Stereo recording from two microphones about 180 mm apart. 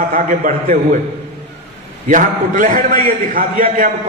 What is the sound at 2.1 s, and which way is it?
A man's voice, 45° right (ahead or behind).